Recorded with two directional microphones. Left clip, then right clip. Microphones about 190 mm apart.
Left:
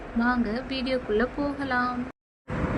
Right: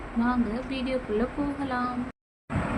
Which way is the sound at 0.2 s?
30° left (ahead or behind).